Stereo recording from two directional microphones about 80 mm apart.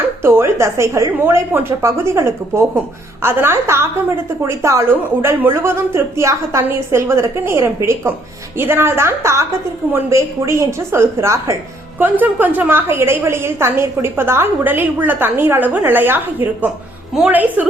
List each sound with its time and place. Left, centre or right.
0.2 s a woman's voice: right
11.9 s a woman's voice: right